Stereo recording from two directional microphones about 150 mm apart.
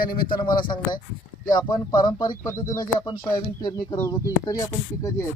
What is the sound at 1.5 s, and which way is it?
Speech, 30° left (ahead or behind).